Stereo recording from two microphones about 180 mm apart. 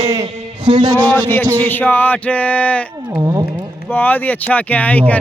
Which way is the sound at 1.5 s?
10° left (ahead or behind).